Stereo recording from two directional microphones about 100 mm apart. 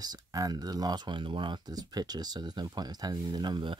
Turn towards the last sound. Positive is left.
turn(degrees=-45)  # may be behind; listen again after turning